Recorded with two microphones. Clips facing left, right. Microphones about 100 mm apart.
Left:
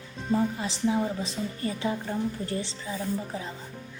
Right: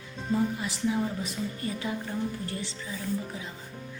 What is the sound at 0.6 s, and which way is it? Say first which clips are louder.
Speech: left 2 dB; 25° left (ahead or behind).